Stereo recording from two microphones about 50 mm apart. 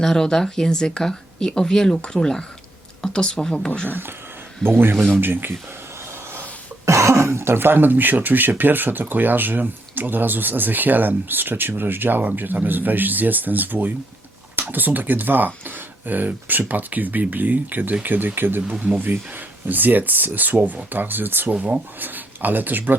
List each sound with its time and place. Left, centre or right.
0.0 s speech: centre
3.8 s speech: right
4.6 s speech: centre
5.2 s speech: right
6.8 s speech: right
18.7 s speech: right